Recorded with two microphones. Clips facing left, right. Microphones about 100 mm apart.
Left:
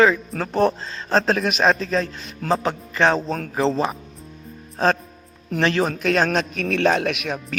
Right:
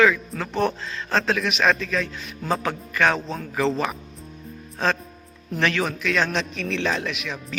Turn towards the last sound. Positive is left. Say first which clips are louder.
# left 6 dB
turn(degrees=60)  # may be behind; listen again after turning